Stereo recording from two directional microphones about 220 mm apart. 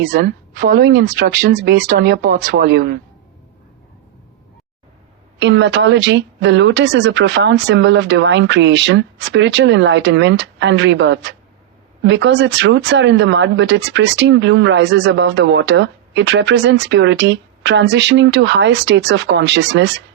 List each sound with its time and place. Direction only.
0.1 s a woman's voice: 45° right (ahead or behind)
5.4 s speech: 55° right (ahead or behind)